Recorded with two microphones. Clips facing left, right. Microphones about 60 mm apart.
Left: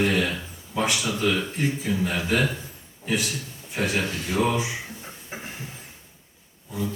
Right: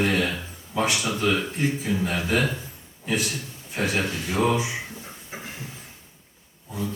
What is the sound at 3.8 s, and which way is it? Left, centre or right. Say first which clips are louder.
Speech: even; right.